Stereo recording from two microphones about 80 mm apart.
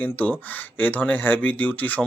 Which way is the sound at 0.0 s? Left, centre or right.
Left.